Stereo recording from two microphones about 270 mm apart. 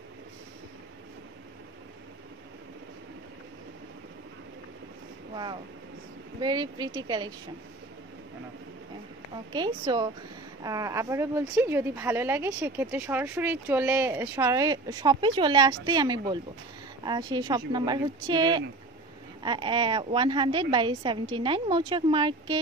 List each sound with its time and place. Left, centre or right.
5.3 s a woman's voice: centre
9.5 s a woman's voice: centre